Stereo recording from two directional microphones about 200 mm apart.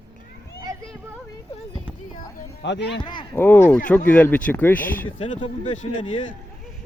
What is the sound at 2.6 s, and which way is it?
Speech, 60° left (ahead or behind).